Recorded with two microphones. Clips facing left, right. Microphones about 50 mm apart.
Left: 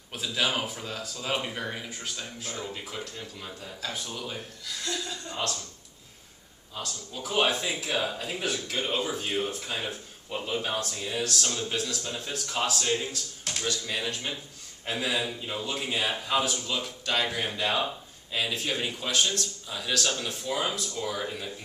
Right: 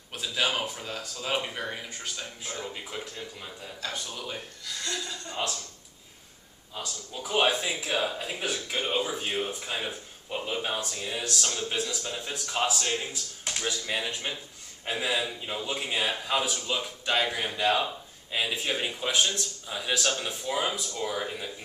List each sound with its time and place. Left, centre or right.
0.1 s speech: centre
5.3 s speech: centre
6.7 s speech: centre